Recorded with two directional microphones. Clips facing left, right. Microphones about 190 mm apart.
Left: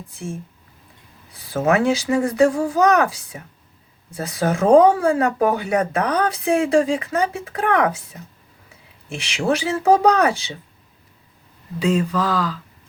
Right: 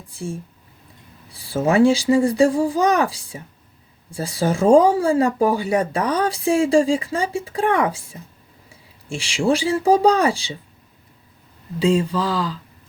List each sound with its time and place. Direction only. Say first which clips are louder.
1.3 s speech: even; 30° right (ahead or behind)
11.8 s speech: right 1 dB; 30° right (ahead or behind)